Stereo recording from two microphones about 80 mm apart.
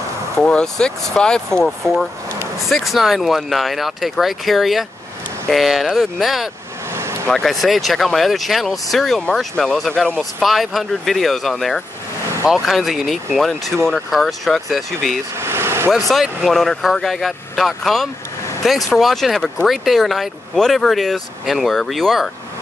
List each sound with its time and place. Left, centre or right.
0.4 s speech: centre
6.9 s vehicle: right
7.2 s speech: centre
15.3 s vehicle: right
16.1 s speech: centre